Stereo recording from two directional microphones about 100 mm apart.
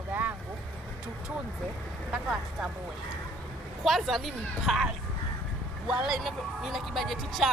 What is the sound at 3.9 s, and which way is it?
Speech, centre (ahead or behind).